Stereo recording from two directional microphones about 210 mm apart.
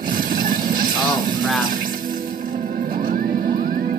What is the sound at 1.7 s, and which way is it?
Music, 40° right (ahead or behind).